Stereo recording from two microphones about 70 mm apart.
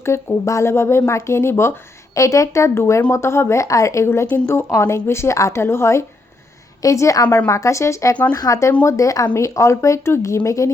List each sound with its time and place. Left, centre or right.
0.1 s speech: left
2.1 s speech: left
8.1 s speech: left
8.4 s speech: left